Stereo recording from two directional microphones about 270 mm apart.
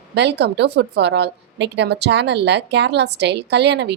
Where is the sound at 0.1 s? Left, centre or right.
Right.